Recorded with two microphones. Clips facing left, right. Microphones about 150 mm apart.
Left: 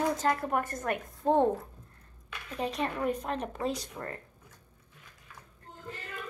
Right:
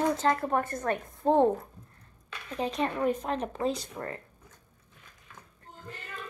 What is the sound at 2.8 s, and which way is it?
Speech, 20° right (ahead or behind).